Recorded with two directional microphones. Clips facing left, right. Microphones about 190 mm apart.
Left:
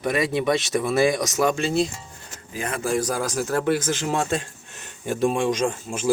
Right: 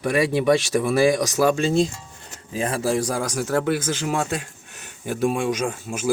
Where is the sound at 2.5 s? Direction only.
30° right (ahead or behind).